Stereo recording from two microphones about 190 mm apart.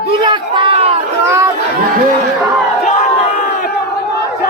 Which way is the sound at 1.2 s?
15° right (ahead or behind).